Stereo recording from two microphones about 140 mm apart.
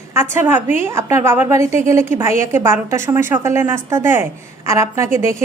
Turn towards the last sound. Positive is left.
turn(degrees=-20)  # may be behind; listen again after turning